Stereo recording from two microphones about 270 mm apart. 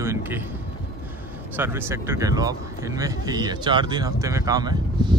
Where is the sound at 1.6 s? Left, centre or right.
Centre.